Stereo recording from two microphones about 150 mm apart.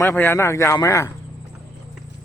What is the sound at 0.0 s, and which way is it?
Speech, 15° left (ahead or behind).